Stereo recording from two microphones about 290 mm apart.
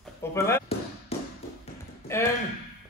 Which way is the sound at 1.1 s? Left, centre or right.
Left.